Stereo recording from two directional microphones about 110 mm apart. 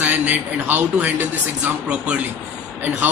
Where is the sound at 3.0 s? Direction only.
15° right (ahead or behind).